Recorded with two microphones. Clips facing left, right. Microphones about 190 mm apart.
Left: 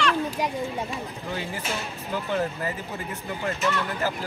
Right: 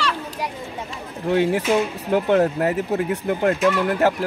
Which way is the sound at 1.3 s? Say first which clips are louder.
Right 15 dB; 70° right (ahead or behind).